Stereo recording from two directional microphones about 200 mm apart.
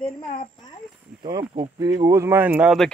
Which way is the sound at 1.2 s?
25° right (ahead or behind).